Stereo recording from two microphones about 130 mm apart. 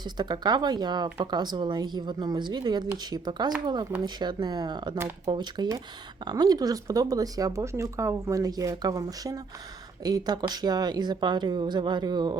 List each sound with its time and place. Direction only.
0.2 s speech: 35° right (ahead or behind)
4.9 s speech: 20° right (ahead or behind)
5.3 s speech: 35° right (ahead or behind)